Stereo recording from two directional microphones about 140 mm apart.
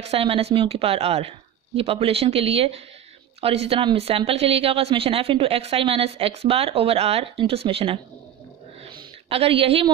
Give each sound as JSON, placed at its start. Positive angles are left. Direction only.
{"t": 0.0, "sound": "a woman's voice", "side_deg": -45}
{"t": 9.3, "sound": "a woman's voice", "side_deg": -40}